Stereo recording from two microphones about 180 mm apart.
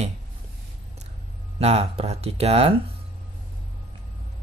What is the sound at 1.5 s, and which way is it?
Speech, 35° right (ahead or behind).